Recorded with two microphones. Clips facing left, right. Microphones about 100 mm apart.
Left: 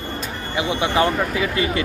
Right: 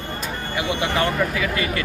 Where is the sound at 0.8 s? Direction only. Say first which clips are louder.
Left 3 dB; 25° left (ahead or behind).